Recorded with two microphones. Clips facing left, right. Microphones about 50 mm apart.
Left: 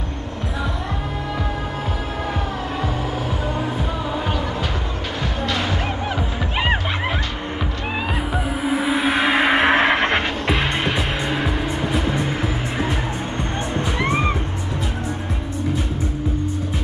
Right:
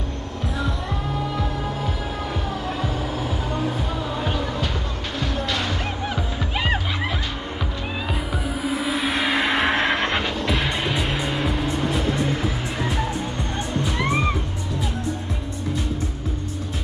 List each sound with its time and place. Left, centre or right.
5.2 s music: centre
8.5 s music: left
11.3 s music: centre
13.9 s music: centre